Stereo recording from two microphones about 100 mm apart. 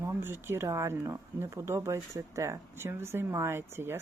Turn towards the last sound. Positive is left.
turn(degrees=-25)  # may be behind; listen again after turning